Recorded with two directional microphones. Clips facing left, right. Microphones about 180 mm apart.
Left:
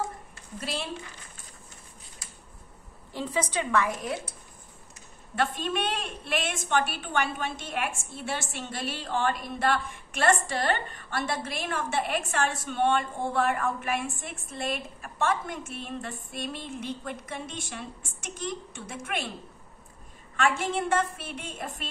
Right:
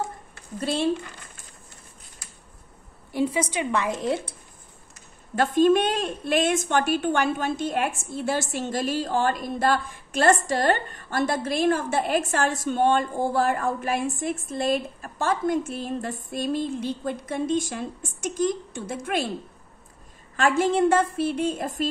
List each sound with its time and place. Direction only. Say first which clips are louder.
0.6 s a woman's voice: right 8 dB; 30° right (ahead or behind)
3.1 s a woman's voice: right 6 dB; 10° right (ahead or behind)
5.3 s a woman's voice: right 10 dB; 40° right (ahead or behind)
20.3 s a woman's voice: right 6 dB; 35° right (ahead or behind)